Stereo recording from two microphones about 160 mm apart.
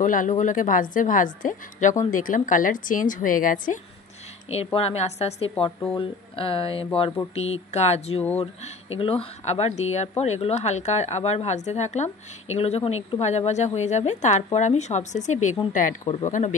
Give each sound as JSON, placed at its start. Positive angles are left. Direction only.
{"t": 0.0, "sound": "a woman's voice", "side_deg": 55}
{"t": 4.7, "sound": "a woman's voice", "side_deg": 40}